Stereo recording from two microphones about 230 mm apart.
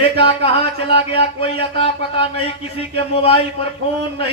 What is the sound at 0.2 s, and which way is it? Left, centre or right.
A man's voice, left.